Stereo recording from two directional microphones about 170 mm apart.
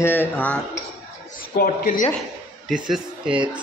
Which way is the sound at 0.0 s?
10° left (ahead or behind).